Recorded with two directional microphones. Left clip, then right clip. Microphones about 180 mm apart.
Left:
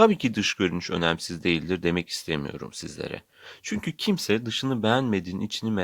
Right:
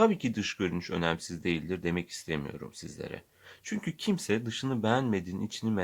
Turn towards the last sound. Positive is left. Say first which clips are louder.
# left 4 dB
turn(degrees=35)  # may be behind; listen again after turning